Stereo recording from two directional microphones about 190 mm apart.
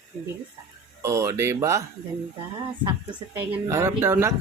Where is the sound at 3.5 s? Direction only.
15° right (ahead or behind).